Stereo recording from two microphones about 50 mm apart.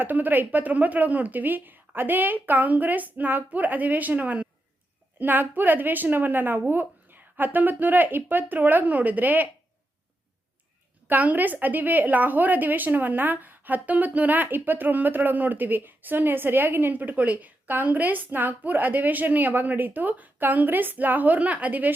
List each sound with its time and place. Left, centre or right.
0.0 s a woman's voice: right
11.1 s a woman's voice: right